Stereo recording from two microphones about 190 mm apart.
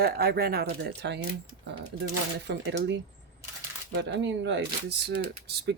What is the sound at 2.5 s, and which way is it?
Speech, 70° right (ahead or behind).